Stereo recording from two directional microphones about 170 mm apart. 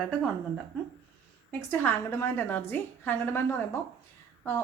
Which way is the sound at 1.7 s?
10° left (ahead or behind).